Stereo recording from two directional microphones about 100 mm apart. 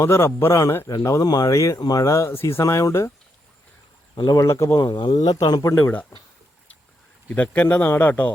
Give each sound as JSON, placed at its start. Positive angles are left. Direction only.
{"t": 0.0, "sound": "a man's voice", "side_deg": 25}
{"t": 4.1, "sound": "speech", "side_deg": 45}
{"t": 4.4, "sound": "speech", "side_deg": 30}
{"t": 4.8, "sound": "speech", "side_deg": 50}
{"t": 5.6, "sound": "a man's voice", "side_deg": 20}
{"t": 7.3, "sound": "speech", "side_deg": 15}